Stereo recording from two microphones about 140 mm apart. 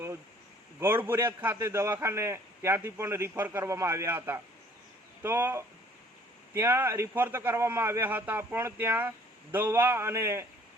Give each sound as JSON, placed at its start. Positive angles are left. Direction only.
{"t": 0.8, "sound": "a man's voice", "side_deg": -15}